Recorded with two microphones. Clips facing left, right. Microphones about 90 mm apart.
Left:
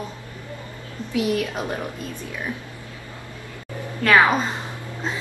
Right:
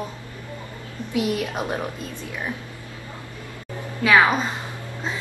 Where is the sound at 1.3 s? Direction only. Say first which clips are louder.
Left 1 dB; 20° right (ahead or behind).